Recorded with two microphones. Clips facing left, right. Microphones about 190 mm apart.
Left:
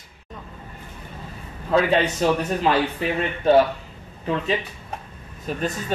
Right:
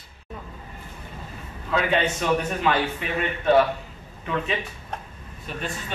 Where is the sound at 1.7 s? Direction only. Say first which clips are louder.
Left 4 dB; 35° left (ahead or behind).